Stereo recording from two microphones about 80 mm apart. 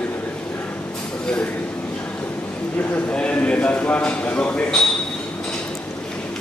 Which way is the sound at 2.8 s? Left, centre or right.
Centre.